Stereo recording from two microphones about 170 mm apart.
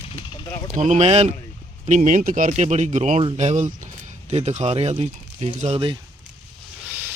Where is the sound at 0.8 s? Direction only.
45° right (ahead or behind).